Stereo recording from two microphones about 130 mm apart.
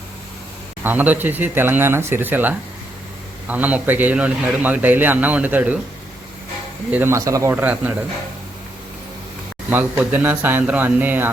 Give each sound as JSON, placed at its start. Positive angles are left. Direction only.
{"t": 0.9, "sound": "a man's voice", "side_deg": -15}
{"t": 6.9, "sound": "speech", "side_deg": -20}
{"t": 7.5, "sound": "a man's voice", "side_deg": -15}
{"t": 9.6, "sound": "a man's voice", "side_deg": -15}